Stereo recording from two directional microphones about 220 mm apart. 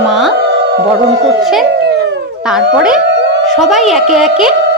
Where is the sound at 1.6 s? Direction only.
50° right (ahead or behind).